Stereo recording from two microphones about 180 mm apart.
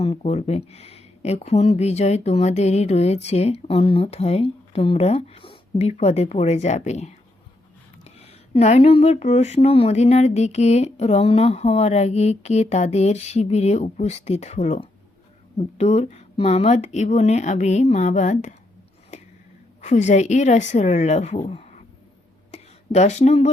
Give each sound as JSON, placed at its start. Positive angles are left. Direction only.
{"t": 0.0, "sound": "speech", "side_deg": 35}
{"t": 19.8, "sound": "speech", "side_deg": 40}
{"t": 22.5, "sound": "a sound", "side_deg": 40}